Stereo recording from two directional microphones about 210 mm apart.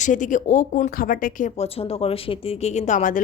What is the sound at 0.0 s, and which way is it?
Speech, 35° left (ahead or behind).